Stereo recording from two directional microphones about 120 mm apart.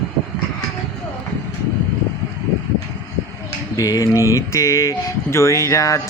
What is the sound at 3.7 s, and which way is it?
Speech, 30° left (ahead or behind).